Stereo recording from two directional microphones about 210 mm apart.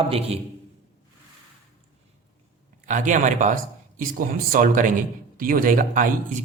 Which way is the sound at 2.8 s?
35° right (ahead or behind).